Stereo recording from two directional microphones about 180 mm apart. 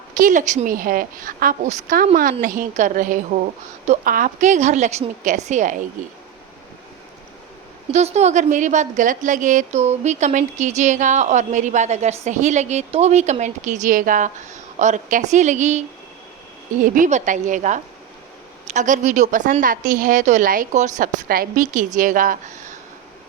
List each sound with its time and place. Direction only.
0.2 s a woman's voice: 45° right (ahead or behind)
7.9 s a woman's voice: 40° right (ahead or behind)
16.8 s a woman's voice: 45° right (ahead or behind)